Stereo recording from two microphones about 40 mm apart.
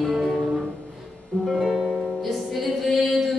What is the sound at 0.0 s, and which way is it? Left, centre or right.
Music, centre.